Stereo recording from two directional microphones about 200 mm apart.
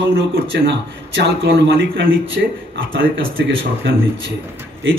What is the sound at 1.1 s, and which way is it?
Speech, 55° right (ahead or behind).